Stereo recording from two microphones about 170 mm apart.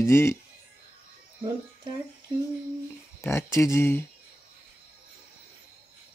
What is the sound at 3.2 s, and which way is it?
Speech, 15° left (ahead or behind).